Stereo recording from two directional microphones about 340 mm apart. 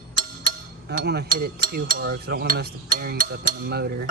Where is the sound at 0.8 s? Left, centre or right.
Right.